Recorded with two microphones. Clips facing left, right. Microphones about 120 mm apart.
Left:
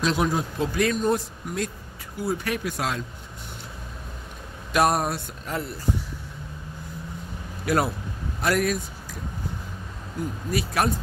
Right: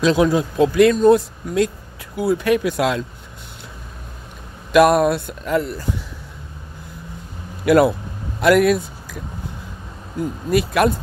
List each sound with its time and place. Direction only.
0.2 s speech: 90° right
4.7 s speech: 85° right
7.6 s speech: 70° right (ahead or behind)
8.4 s speech: 85° right
10.5 s speech: 65° right (ahead or behind)